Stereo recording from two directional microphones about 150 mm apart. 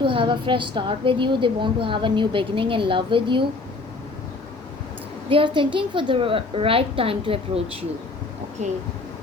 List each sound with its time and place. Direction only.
0.0 s a woman's voice: 35° right (ahead or behind)
5.3 s a woman's voice: 35° right (ahead or behind)
8.6 s speech: 50° right (ahead or behind)